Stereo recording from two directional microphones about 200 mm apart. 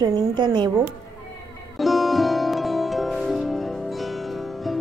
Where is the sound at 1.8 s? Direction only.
Centre (ahead or behind).